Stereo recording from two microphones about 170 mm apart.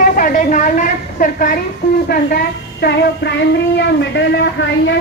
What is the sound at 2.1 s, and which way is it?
A child's voice, 65° left (ahead or behind).